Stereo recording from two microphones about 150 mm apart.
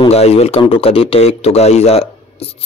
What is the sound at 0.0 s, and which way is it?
Speech, 45° left (ahead or behind).